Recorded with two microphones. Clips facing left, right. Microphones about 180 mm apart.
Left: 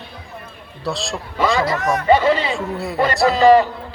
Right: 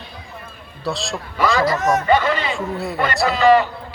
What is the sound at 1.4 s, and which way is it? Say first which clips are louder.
Speech: even; 20° left (ahead or behind).